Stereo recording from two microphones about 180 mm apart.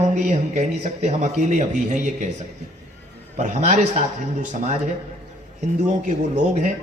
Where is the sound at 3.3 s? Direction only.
45° right (ahead or behind).